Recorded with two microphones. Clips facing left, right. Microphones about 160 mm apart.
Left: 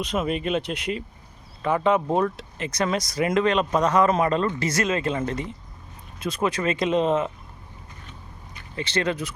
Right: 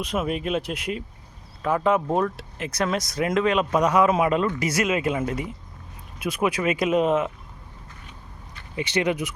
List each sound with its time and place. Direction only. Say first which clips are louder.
0.0 s speech: left 1 dB; 5° right (ahead or behind)
8.7 s speech: right 2 dB; 15° right (ahead or behind)